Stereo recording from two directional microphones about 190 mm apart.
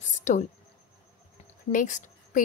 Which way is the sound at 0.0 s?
40° left (ahead or behind).